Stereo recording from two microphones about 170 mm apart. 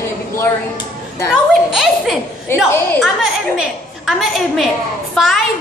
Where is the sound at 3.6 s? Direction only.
Centre (ahead or behind).